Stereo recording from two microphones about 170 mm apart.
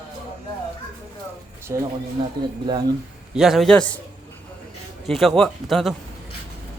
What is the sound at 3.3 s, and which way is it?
Speech, centre (ahead or behind).